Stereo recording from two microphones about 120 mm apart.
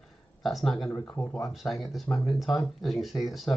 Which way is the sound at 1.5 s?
Centre (ahead or behind).